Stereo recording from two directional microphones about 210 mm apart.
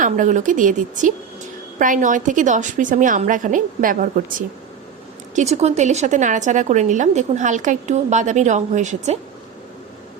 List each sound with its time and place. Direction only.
0.0 s a woman's voice: 35° right (ahead or behind)